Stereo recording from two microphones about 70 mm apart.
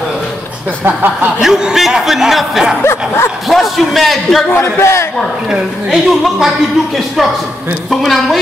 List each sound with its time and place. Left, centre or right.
0.8 s chuckle: right
1.4 s a man's voice: centre
2.8 s a man's voice: left
3.4 s a man's voice: centre
4.5 s a man's voice: left
5.5 s a man's voice: centre
7.9 s a man's voice: centre